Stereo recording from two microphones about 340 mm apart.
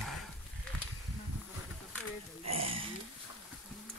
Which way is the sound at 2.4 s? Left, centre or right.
Right.